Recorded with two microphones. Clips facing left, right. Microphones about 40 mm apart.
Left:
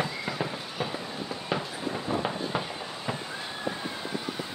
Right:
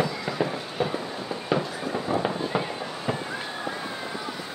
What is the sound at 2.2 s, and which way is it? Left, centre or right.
Fireworks, centre.